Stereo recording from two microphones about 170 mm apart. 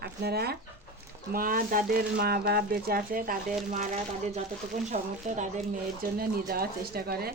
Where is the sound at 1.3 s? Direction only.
55° right (ahead or behind).